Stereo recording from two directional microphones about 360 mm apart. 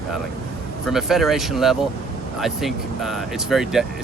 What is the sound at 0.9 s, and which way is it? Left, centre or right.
Speech, centre.